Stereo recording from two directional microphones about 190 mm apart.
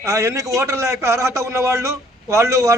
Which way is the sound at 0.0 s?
15° right (ahead or behind).